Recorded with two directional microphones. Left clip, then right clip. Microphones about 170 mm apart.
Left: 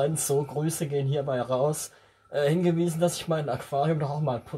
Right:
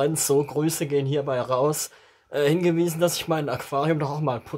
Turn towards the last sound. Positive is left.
turn(degrees=-30)  # may be behind; listen again after turning